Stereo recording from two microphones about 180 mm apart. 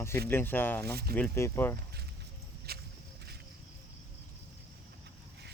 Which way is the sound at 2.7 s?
60° right (ahead or behind).